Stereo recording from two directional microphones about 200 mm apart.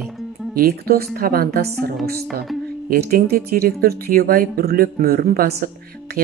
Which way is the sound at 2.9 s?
50° right (ahead or behind).